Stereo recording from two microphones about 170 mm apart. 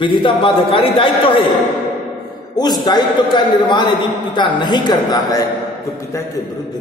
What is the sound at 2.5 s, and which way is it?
A man's voice, 25° left (ahead or behind).